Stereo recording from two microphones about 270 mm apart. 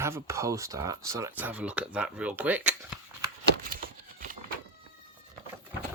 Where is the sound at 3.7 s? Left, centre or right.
Right.